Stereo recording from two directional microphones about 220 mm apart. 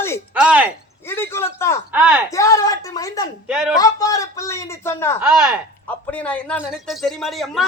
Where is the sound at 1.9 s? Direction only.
5° right (ahead or behind).